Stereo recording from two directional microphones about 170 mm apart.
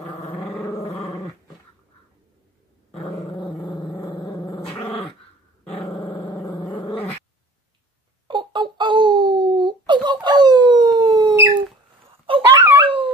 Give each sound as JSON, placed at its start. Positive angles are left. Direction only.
{"t": 0.2, "sound": "dog", "side_deg": 35}
{"t": 0.6, "sound": "dog", "side_deg": 15}
{"t": 2.9, "sound": "dog", "side_deg": 30}
{"t": 3.7, "sound": "dog", "side_deg": 5}
{"t": 5.9, "sound": "a sound", "side_deg": 10}
{"t": 8.3, "sound": "wail", "side_deg": -30}
{"t": 12.4, "sound": "dog", "side_deg": -15}
{"t": 12.8, "sound": "dog", "side_deg": -30}